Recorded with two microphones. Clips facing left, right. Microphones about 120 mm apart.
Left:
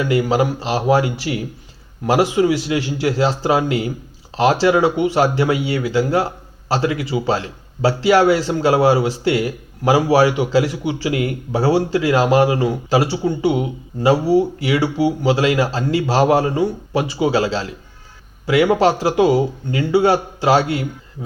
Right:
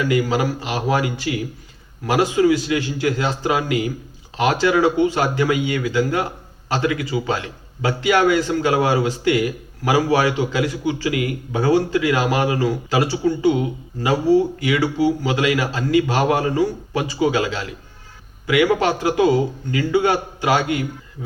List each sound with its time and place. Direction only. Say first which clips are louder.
0.0 s a man's voice: left 2 dB; 25° left (ahead or behind)